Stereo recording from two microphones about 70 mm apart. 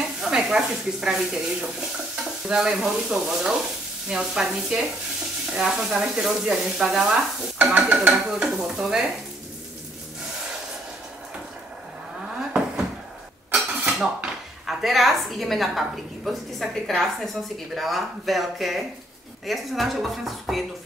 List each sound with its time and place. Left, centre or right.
0.2 s sizzle: centre
7.7 s sizzle: centre
13.6 s a sound: centre
14.7 s a woman's voice: centre